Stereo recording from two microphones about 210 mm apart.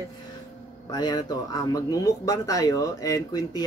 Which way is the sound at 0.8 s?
20° left (ahead or behind).